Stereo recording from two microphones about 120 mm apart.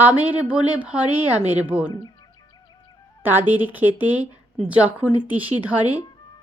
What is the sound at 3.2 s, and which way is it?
Speech, 15° right (ahead or behind).